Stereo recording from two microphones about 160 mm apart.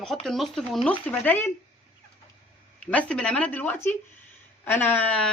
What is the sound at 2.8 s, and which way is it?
Speech, 10° left (ahead or behind).